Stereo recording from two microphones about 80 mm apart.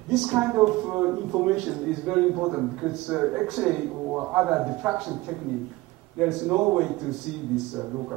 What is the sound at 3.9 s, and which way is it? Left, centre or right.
Speech, right.